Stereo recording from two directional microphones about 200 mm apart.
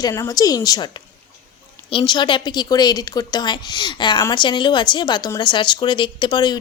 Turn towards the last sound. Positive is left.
turn(degrees=20)  # may be behind; listen again after turning